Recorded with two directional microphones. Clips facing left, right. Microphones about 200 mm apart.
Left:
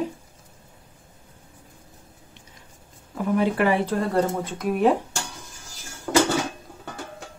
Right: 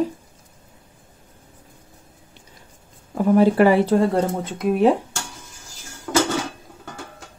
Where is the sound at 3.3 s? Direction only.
35° right (ahead or behind).